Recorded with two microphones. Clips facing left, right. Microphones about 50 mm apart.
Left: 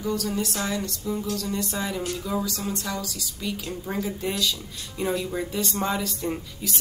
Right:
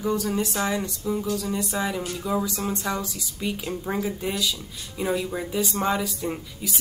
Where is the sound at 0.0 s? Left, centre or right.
Right.